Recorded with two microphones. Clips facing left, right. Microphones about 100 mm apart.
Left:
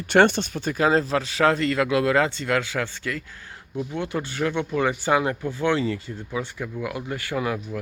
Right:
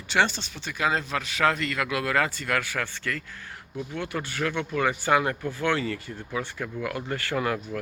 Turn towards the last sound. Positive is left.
turn(degrees=10)  # may be behind; listen again after turning